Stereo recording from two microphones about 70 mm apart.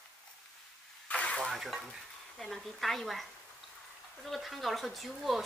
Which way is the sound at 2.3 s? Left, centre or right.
Centre.